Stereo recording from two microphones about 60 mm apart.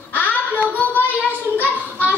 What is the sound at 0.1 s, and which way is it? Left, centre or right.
Child singing, left.